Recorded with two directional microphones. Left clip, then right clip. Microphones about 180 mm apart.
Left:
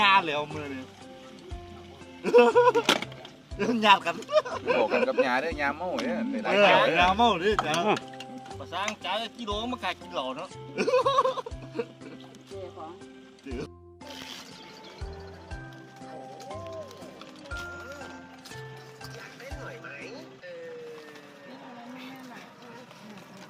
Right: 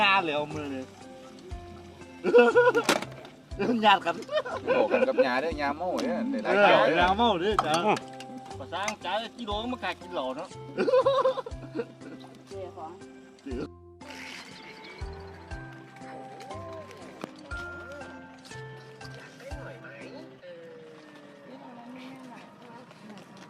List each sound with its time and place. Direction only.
0.0 s speech: 65° left (ahead or behind)
2.2 s speech: 70° left (ahead or behind)
2.8 s speech: 5° right (ahead or behind)
3.6 s speech: 70° left (ahead or behind)
5.2 s speech: 25° left (ahead or behind)
6.6 s speech: 70° left (ahead or behind)
7.9 s music: 5° right (ahead or behind)
9.0 s speech: 70° left (ahead or behind)
13.5 s speech: 70° left (ahead or behind)